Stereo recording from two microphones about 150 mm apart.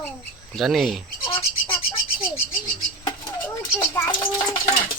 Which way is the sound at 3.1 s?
30° left (ahead or behind).